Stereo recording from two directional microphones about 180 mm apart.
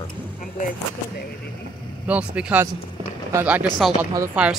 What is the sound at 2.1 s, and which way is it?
Speech, 5° right (ahead or behind).